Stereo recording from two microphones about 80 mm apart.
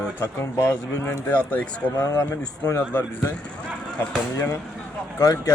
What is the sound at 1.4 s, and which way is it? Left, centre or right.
Speech, centre.